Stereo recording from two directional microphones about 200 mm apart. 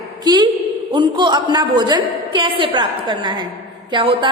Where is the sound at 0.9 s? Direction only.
25° right (ahead or behind).